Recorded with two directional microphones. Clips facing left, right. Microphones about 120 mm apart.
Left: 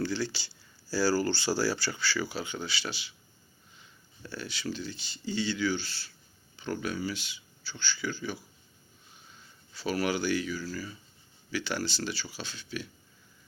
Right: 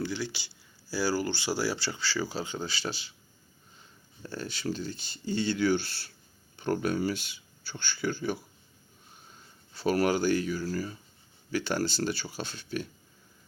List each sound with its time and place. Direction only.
0.0 s speech: 15° right (ahead or behind); by 12.9 s 50° right (ahead or behind)